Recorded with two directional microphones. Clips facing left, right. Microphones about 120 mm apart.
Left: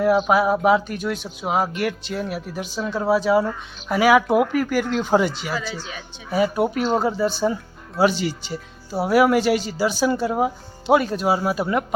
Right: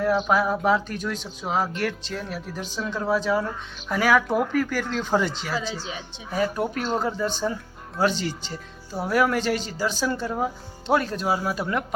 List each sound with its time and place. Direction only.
0.0 s speech: 10° left (ahead or behind)
5.5 s speech: 25° right (ahead or behind)
6.3 s speech: 10° left (ahead or behind)